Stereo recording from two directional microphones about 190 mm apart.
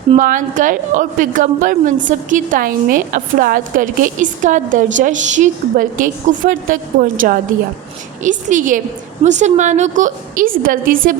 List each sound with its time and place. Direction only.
0.2 s a woman's voice: 45° right (ahead or behind)
8.2 s a woman's voice: 40° right (ahead or behind)